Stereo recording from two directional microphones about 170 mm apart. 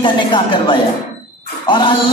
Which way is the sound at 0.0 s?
30° left (ahead or behind).